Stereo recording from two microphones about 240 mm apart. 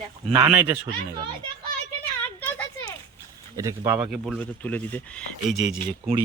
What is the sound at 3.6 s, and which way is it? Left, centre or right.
Speech, centre.